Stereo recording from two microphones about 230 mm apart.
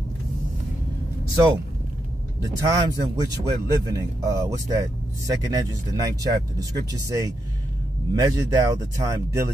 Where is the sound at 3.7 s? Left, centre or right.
Centre.